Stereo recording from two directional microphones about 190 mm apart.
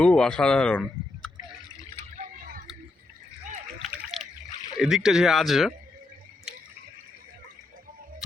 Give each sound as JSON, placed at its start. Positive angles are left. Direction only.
{"t": 0.0, "sound": "speech", "side_deg": 5}
{"t": 2.1, "sound": "a sound", "side_deg": -45}
{"t": 3.9, "sound": "splash", "side_deg": 0}
{"t": 4.8, "sound": "speech", "side_deg": 0}